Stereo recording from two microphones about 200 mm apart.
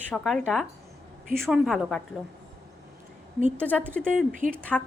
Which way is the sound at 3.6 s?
5° left (ahead or behind).